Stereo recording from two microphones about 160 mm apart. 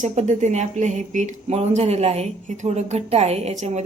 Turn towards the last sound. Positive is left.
turn(degrees=-45)  # may be behind; listen again after turning